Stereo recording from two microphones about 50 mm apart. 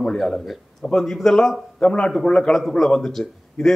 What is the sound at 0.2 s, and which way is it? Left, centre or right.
A man's voice, centre.